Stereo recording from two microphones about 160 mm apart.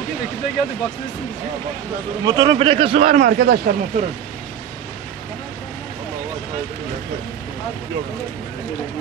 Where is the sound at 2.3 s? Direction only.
30° right (ahead or behind).